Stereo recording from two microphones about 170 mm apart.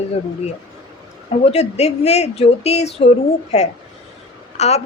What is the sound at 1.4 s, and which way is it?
A woman's voice, 40° left (ahead or behind).